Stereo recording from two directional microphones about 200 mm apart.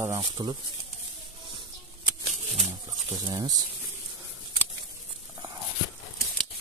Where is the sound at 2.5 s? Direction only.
30° right (ahead or behind).